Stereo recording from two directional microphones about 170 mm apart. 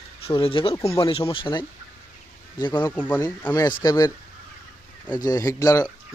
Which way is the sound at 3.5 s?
25° left (ahead or behind).